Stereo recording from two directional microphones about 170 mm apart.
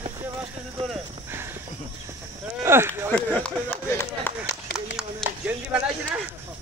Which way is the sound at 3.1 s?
5° left (ahead or behind).